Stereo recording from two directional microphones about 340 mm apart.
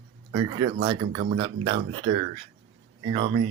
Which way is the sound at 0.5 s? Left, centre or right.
Right.